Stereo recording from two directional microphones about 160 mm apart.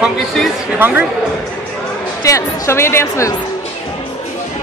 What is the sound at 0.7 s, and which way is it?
Speech, 10° right (ahead or behind).